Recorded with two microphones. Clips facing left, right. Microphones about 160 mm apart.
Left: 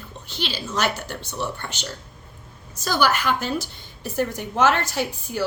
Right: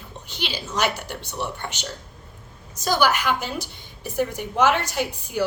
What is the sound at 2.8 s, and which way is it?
A woman's voice, 15° right (ahead or behind).